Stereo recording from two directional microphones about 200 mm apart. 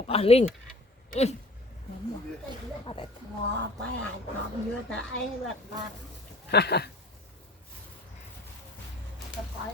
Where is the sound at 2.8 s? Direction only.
25° left (ahead or behind).